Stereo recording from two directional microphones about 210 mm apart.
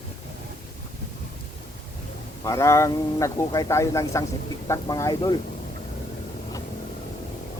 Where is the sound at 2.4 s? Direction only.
15° left (ahead or behind).